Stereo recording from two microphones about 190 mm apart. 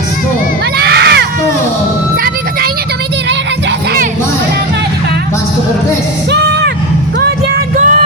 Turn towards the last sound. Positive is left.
turn(degrees=-50)  # may be behind; listen again after turning